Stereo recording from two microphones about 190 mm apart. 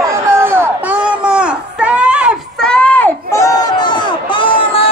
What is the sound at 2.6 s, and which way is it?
Crowd, 5° left (ahead or behind).